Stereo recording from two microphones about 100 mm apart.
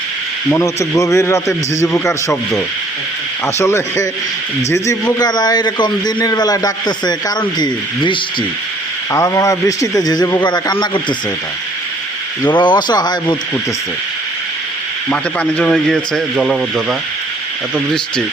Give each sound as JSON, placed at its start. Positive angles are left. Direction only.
{"t": 0.5, "sound": "a man's voice", "side_deg": 30}
{"t": 3.4, "sound": "a man's voice", "side_deg": 25}
{"t": 9.1, "sound": "a man's voice", "side_deg": 35}
{"t": 12.5, "sound": "a man's voice", "side_deg": 50}
{"t": 15.1, "sound": "a man's voice", "side_deg": 10}